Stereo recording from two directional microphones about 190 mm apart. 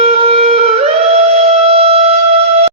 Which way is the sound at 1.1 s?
30° right (ahead or behind).